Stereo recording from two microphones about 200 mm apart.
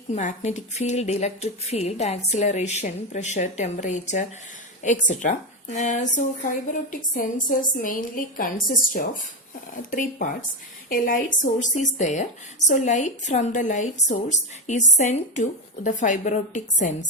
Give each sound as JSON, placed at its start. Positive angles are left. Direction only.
{"t": 0.2, "sound": "a woman's voice", "side_deg": 40}